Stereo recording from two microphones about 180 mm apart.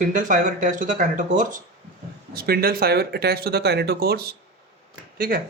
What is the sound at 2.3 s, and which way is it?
Speech, 55° right (ahead or behind).